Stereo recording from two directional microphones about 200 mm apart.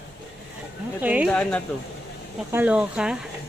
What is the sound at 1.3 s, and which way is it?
Speech, 5° left (ahead or behind).